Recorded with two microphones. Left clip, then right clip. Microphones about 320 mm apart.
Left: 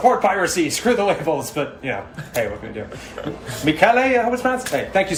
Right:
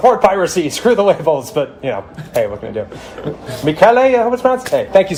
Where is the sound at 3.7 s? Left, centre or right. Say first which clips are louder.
Right 6 dB; right.